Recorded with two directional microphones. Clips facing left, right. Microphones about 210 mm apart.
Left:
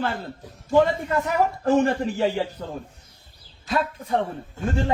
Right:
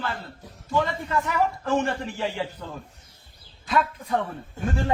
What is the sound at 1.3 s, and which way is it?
A man's voice, 40° left (ahead or behind).